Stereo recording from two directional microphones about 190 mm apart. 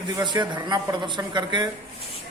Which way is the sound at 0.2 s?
25° right (ahead or behind).